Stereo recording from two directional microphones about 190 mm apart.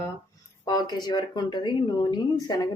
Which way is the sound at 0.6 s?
20° left (ahead or behind).